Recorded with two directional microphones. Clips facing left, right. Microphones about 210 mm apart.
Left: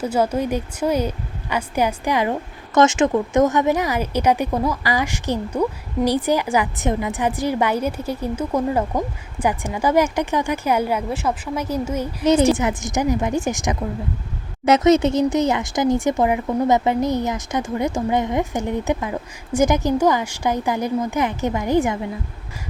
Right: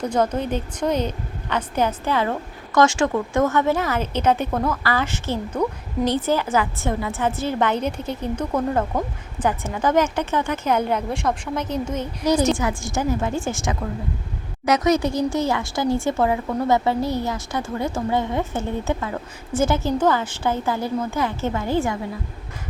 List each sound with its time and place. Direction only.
0.0 s speech: 10° left (ahead or behind)
12.2 s a woman's voice: 25° left (ahead or behind)